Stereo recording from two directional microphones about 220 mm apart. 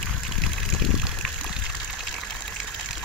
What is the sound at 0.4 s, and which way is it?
Water, centre (ahead or behind).